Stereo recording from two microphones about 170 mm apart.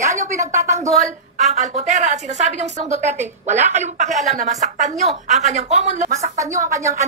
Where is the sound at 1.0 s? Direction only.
40° right (ahead or behind).